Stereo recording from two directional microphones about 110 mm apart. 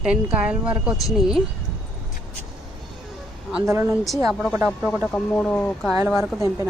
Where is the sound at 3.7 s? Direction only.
25° right (ahead or behind).